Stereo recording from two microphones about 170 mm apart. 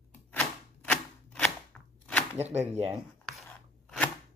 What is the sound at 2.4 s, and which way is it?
Speech, 40° right (ahead or behind).